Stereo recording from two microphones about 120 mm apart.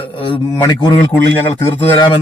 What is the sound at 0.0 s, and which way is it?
Speech, 50° left (ahead or behind).